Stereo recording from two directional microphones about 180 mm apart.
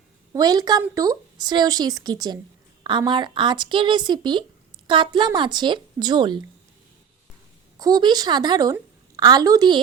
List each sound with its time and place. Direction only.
0.3 s a woman's voice: 20° right (ahead or behind)
7.8 s a woman's voice: 20° right (ahead or behind)